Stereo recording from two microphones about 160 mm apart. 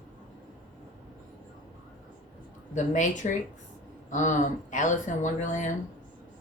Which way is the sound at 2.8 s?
50° left (ahead or behind).